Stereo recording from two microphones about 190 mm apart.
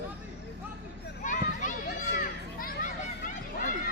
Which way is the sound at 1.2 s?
40° left (ahead or behind).